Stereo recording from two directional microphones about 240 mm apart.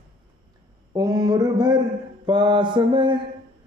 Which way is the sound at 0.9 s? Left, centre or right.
Centre.